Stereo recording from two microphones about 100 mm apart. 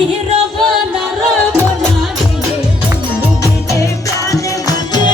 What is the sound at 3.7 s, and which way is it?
Music, 30° left (ahead or behind).